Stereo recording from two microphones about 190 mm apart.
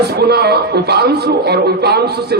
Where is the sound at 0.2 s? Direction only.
60° right (ahead or behind).